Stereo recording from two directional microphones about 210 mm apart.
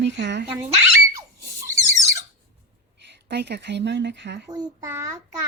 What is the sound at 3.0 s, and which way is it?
Speech, 55° right (ahead or behind).